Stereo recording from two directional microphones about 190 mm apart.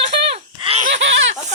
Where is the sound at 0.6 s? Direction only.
30° right (ahead or behind).